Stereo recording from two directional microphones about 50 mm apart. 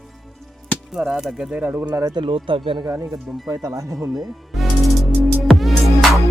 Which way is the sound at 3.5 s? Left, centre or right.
Right.